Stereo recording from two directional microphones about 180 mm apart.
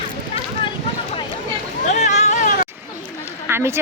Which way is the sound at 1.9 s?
40° left (ahead or behind).